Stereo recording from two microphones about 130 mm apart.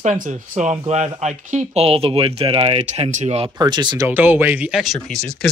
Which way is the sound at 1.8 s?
45° right (ahead or behind).